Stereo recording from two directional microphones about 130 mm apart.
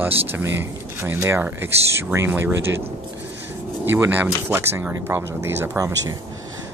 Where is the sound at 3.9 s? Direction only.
15° right (ahead or behind).